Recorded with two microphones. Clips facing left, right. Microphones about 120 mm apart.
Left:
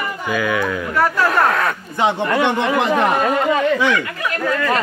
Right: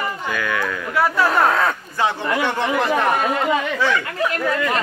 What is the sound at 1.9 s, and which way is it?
A man's voice, 20° left (ahead or behind).